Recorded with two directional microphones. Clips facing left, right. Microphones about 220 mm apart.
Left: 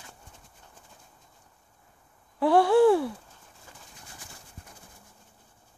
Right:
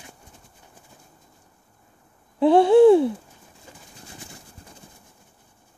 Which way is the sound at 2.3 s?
20° right (ahead or behind).